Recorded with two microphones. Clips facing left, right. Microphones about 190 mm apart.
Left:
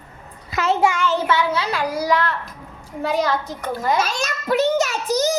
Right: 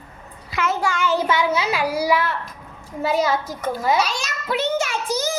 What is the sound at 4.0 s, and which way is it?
A child's voice, 50° left (ahead or behind).